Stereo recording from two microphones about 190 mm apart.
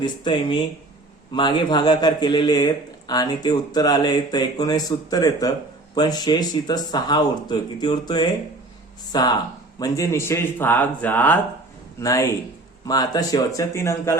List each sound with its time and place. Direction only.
0.0 s speech: 25° left (ahead or behind)